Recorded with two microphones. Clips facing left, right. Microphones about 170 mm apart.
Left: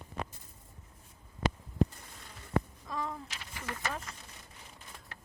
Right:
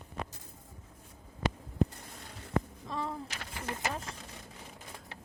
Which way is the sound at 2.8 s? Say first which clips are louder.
Right 1 dB; 30° right (ahead or behind).